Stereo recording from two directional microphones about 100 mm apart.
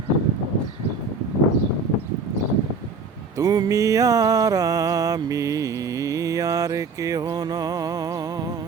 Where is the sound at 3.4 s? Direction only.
35° right (ahead or behind).